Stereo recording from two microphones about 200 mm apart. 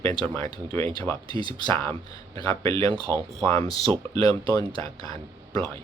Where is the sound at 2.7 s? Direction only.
30° right (ahead or behind).